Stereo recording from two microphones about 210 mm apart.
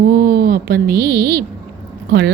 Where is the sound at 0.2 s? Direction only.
50° right (ahead or behind).